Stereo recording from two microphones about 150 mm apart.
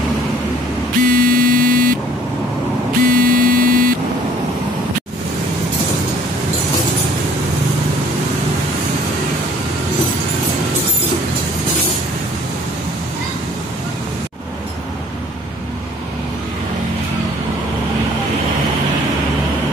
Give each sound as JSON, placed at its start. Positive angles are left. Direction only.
{"t": 1.0, "sound": "vehicle", "side_deg": -70}
{"t": 3.0, "sound": "vehicle", "side_deg": -75}